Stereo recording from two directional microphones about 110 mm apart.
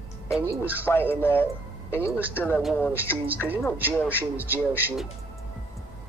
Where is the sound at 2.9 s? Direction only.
15° right (ahead or behind).